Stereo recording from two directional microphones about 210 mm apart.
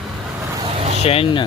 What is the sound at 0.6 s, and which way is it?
Vehicle, 30° right (ahead or behind).